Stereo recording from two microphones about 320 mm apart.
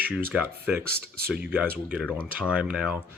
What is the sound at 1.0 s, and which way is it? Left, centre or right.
Speech, right.